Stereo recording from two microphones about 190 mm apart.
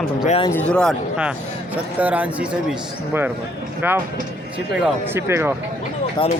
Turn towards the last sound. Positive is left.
turn(degrees=25)  # may be behind; listen again after turning